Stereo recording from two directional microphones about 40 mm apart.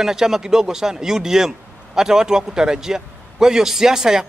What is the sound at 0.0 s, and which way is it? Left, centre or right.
A man's voice, centre.